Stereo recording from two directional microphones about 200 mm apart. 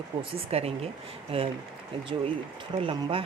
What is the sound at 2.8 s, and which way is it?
Speech, 25° right (ahead or behind).